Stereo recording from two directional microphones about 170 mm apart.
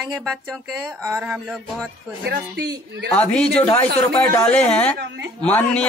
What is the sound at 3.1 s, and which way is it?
Speech, 5° left (ahead or behind).